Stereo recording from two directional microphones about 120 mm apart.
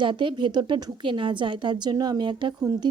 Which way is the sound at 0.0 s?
45° right (ahead or behind).